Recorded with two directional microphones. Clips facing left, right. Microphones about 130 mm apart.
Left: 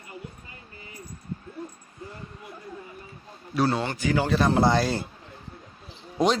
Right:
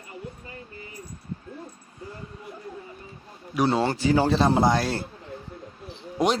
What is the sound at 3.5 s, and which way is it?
Speech, 20° right (ahead or behind).